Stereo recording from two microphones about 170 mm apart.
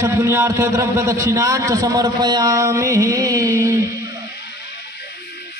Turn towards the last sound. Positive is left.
turn(degrees=-15)  # may be behind; listen again after turning